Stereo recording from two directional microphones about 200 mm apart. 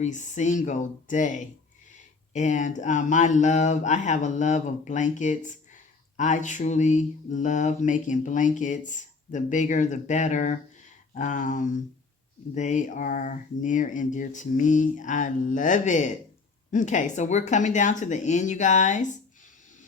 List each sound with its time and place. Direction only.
0.0 s mantra: 40° left (ahead or behind)